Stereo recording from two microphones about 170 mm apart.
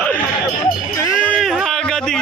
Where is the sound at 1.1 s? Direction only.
5° left (ahead or behind).